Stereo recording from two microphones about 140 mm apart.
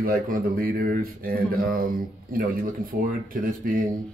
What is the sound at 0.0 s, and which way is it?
Speech, 90° right.